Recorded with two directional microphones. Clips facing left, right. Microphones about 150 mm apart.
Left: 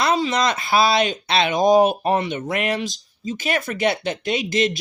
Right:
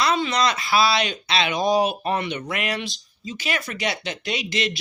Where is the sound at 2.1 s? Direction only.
35° left (ahead or behind).